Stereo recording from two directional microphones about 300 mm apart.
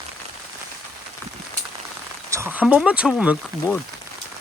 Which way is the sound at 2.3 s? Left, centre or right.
Centre.